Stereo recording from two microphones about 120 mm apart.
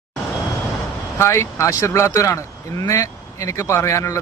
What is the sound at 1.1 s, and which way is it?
Speech, 25° left (ahead or behind).